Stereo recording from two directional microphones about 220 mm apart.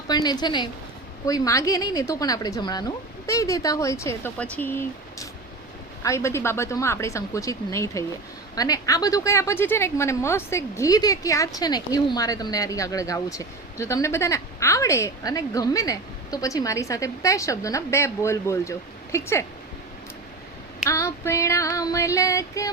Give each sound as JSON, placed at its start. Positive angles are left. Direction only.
{"t": 0.1, "sound": "a woman's voice", "side_deg": 20}
{"t": 20.8, "sound": "a woman's voice", "side_deg": 15}